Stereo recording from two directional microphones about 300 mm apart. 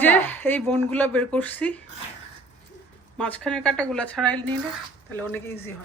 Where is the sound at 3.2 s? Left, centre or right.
Centre.